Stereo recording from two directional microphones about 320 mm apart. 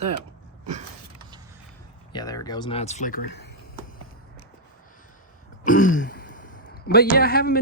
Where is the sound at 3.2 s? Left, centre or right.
Left.